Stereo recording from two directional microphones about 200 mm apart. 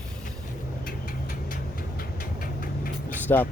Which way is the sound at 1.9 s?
45° left (ahead or behind).